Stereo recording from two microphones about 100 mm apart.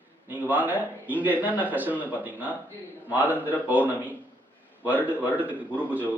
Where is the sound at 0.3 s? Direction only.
15° right (ahead or behind).